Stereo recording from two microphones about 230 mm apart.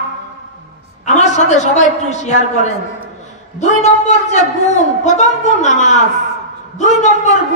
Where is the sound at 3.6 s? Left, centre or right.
Left.